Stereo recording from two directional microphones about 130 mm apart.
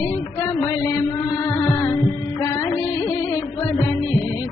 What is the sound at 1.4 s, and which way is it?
Music, 25° left (ahead or behind).